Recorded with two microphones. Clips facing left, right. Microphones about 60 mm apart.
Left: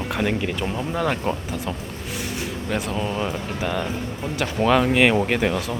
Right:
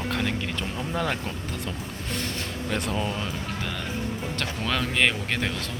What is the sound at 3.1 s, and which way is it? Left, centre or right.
Speech, centre.